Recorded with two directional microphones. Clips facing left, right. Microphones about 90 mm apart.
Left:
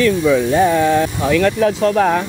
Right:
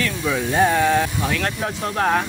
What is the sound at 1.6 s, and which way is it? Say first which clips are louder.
Speech: left 11 dB; 90° left.